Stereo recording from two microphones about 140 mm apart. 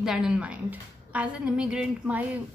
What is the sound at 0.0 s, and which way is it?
A woman's voice, 5° right (ahead or behind).